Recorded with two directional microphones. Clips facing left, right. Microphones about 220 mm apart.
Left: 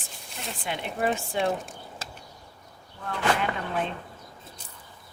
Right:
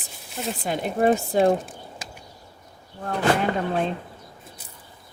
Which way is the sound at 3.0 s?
40° right (ahead or behind).